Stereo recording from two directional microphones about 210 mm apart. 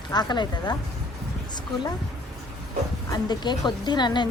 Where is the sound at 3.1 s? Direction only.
20° left (ahead or behind).